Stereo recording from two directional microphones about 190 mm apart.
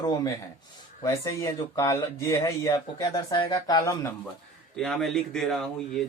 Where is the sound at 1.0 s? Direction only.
15° left (ahead or behind).